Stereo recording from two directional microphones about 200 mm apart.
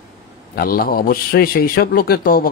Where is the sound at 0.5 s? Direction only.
45° left (ahead or behind).